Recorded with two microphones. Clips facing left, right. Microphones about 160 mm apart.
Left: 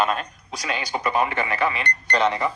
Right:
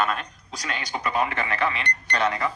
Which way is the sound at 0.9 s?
20° left (ahead or behind).